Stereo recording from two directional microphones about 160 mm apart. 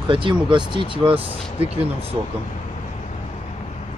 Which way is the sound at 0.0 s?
30° right (ahead or behind).